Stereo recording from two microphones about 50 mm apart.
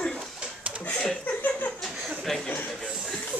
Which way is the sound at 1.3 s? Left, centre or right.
Left.